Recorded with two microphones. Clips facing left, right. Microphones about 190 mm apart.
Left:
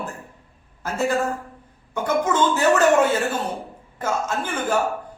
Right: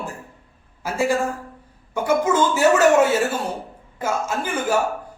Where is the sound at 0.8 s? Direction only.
10° right (ahead or behind).